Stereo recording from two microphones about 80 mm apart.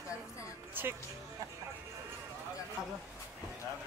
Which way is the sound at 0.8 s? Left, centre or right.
Right.